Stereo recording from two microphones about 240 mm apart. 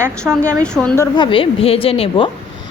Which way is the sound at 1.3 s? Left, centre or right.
Left.